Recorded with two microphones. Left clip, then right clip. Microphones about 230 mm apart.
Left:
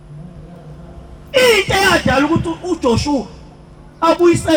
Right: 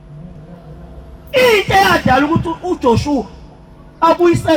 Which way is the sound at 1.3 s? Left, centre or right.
Right.